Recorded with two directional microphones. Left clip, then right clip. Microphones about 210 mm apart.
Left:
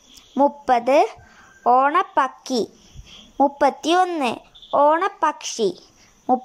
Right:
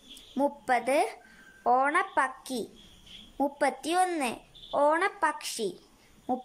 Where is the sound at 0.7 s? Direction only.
10° left (ahead or behind).